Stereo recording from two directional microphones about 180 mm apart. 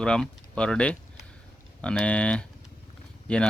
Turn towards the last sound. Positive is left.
turn(degrees=5)  # may be behind; listen again after turning